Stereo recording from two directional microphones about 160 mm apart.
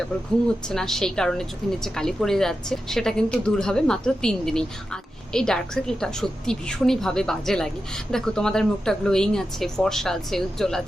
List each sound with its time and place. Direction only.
0.7 s a woman's voice: 5° left (ahead or behind)